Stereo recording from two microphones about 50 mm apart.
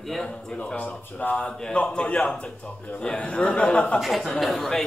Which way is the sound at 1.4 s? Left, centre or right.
Centre.